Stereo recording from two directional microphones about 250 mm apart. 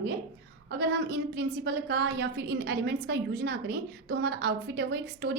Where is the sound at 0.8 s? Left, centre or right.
Right.